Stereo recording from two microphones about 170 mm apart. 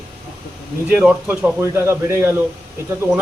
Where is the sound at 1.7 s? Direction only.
15° right (ahead or behind).